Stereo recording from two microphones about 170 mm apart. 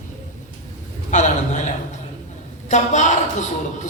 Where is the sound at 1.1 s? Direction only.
45° left (ahead or behind).